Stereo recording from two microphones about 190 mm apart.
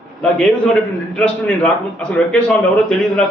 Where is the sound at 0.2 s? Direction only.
5° left (ahead or behind).